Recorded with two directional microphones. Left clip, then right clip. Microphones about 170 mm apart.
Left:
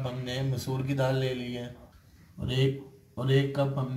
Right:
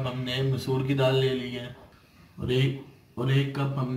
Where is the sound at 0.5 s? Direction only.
30° left (ahead or behind).